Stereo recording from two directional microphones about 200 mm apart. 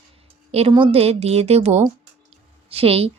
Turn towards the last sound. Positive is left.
turn(degrees=-30)  # may be behind; listen again after turning